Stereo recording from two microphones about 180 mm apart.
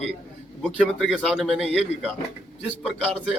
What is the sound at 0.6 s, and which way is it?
A man's voice, 5° left (ahead or behind).